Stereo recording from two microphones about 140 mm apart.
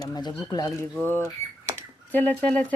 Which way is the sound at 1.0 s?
15° left (ahead or behind).